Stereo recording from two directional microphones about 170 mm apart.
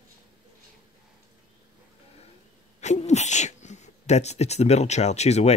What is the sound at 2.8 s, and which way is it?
Speech, 40° left (ahead or behind).